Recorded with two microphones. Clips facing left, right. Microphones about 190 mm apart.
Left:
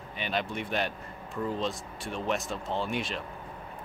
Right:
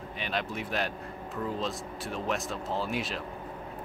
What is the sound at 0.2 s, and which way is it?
Speech, centre (ahead or behind).